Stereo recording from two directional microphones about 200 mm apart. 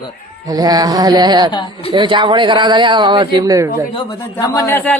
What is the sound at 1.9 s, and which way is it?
Speech, 25° right (ahead or behind).